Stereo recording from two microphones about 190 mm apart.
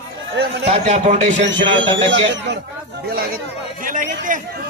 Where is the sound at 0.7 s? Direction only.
35° right (ahead or behind).